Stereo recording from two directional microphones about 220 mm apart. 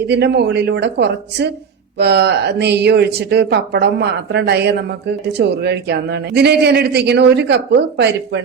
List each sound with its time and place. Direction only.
0.1 s a man's voice: 50° right (ahead or behind)